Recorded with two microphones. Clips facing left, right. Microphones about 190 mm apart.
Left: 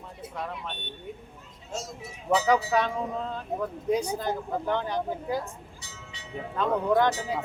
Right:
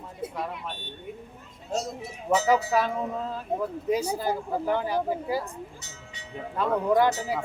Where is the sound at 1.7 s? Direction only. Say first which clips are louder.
Right 6 dB; 35° right (ahead or behind).